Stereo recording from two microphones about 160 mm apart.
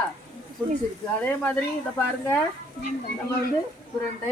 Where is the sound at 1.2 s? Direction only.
10° left (ahead or behind).